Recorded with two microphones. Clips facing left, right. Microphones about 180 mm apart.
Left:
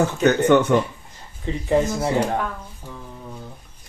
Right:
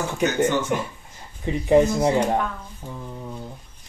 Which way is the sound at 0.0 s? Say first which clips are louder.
Left 4 dB; 60° left (ahead or behind).